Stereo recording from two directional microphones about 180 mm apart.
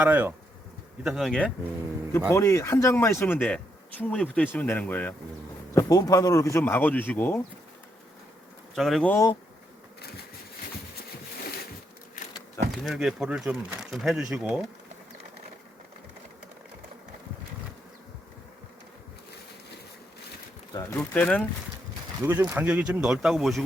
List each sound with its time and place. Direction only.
0.0 s speech: 10° right (ahead or behind)
2.3 s speech: 15° left (ahead or behind)
8.7 s speech: centre (ahead or behind)
12.7 s speech: centre (ahead or behind)
20.7 s speech: 10° left (ahead or behind)
22.2 s speech: 15° right (ahead or behind)